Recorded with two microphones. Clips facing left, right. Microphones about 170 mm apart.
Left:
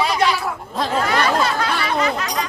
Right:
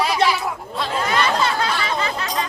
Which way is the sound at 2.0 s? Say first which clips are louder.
Left 3 dB; 30° right (ahead or behind).